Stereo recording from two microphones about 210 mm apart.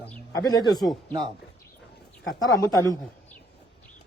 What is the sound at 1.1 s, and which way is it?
Speech, 25° right (ahead or behind).